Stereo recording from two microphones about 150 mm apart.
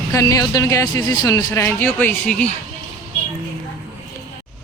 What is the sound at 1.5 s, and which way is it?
Speech, 10° left (ahead or behind).